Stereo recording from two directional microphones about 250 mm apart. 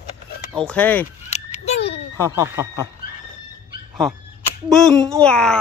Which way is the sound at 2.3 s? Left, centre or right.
Centre.